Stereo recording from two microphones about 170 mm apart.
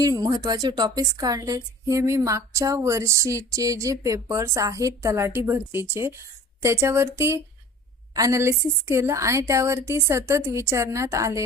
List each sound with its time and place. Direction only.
0.0 s a woman's voice: 20° right (ahead or behind)